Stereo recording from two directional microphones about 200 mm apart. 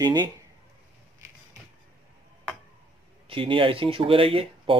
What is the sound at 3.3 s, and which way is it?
Speech, 25° right (ahead or behind).